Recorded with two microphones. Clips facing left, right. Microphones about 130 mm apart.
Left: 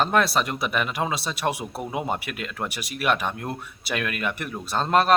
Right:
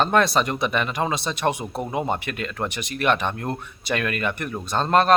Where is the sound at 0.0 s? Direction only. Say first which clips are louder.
Right 2 dB; 5° left (ahead or behind).